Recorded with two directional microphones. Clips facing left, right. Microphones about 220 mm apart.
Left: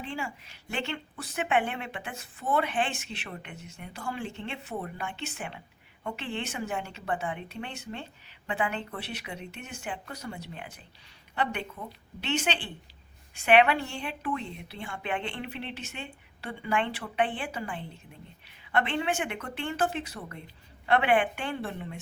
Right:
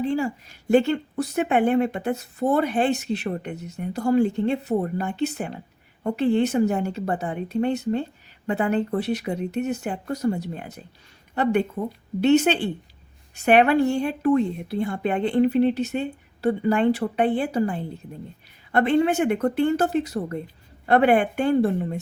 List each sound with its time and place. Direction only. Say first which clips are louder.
0.0 s a woman's voice: right 13 dB; 40° right (ahead or behind)